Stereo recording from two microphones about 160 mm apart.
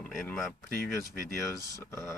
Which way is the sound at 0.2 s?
5° left (ahead or behind).